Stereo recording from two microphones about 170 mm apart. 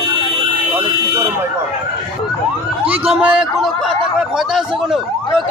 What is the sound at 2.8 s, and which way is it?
Police car, 35° right (ahead or behind).